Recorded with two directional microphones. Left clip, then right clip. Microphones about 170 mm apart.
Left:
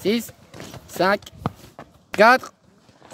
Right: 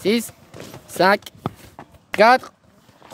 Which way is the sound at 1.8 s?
35° left (ahead or behind).